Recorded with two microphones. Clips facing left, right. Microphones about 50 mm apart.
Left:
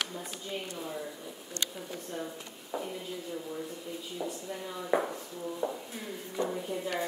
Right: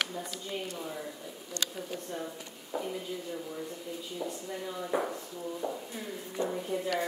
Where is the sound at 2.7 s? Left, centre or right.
Centre.